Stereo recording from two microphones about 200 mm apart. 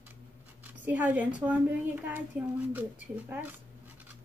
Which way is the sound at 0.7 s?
10° right (ahead or behind).